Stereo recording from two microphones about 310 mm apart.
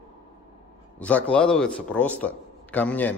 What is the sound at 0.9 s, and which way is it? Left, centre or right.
A man's voice, centre.